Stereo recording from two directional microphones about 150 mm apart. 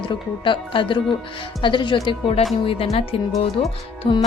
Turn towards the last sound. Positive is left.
turn(degrees=45)  # may be behind; listen again after turning